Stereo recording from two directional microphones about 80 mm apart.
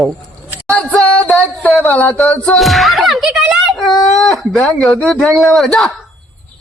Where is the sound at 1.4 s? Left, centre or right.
Centre.